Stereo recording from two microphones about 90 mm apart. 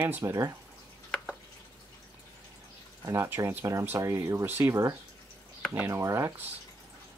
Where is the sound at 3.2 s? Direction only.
25° right (ahead or behind).